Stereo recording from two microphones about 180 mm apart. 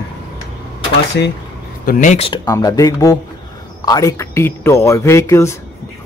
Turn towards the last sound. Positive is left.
turn(degrees=15)  # may be behind; listen again after turning